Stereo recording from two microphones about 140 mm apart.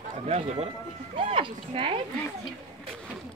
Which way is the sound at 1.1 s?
40° right (ahead or behind).